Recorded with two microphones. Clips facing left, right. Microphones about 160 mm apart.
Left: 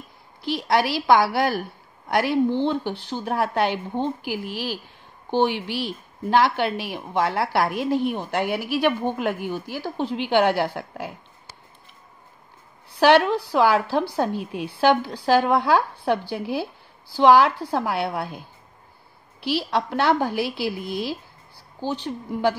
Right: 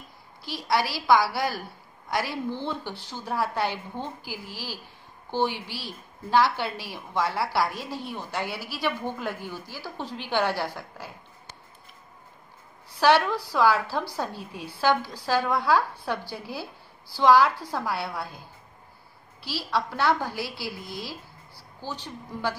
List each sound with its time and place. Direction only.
0.5 s a woman's voice: 65° left (ahead or behind)
13.0 s speech: 70° left (ahead or behind)
19.4 s speech: 65° left (ahead or behind)
20.4 s a woman's voice: 20° left (ahead or behind)
21.8 s speech: 65° left (ahead or behind)